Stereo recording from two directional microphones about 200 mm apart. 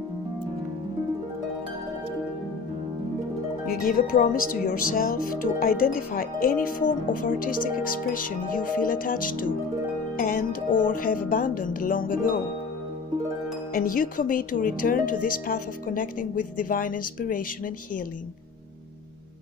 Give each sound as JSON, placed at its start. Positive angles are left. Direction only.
{"t": 3.6, "sound": "speech", "side_deg": 45}
{"t": 13.7, "sound": "speech", "side_deg": 45}